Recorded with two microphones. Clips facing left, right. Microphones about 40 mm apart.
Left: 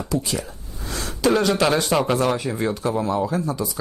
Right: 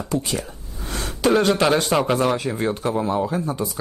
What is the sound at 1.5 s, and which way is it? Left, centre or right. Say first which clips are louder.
Speech: right 1 dB; centre.